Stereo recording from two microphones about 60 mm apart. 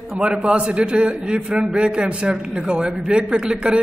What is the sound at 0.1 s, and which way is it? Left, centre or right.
A man's voice, centre.